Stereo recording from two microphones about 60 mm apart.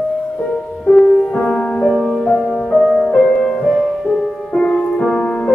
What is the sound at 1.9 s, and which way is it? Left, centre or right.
Music, centre.